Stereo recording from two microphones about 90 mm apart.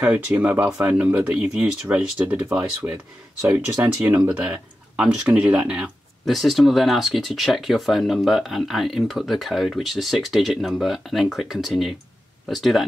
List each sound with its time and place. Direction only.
0.0 s speech: 15° right (ahead or behind)
6.2 s speech: centre (ahead or behind)